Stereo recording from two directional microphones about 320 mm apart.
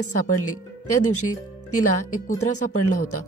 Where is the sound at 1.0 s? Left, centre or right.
Left.